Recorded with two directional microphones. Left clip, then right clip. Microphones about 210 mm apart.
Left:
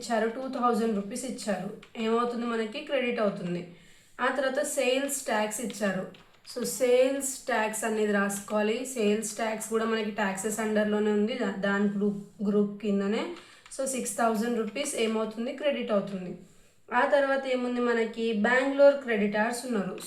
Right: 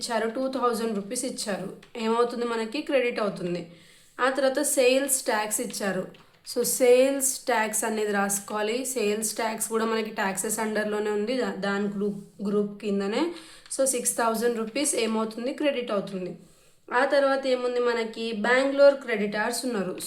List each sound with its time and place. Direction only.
0.0 s a woman's voice: 50° right (ahead or behind)
12.8 s a woman's voice: 45° right (ahead or behind)